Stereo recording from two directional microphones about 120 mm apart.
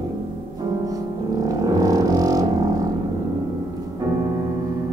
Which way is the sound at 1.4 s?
30° right (ahead or behind).